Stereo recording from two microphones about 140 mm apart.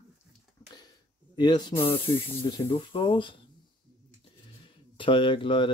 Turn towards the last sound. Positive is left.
turn(degrees=35)  # may be behind; listen again after turning